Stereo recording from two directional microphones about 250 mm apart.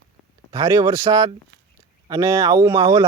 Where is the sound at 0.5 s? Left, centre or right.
Centre.